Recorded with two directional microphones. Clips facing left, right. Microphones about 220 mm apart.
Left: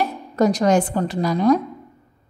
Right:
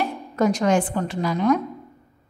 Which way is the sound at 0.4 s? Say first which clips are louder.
Left 3 dB; 35° left (ahead or behind).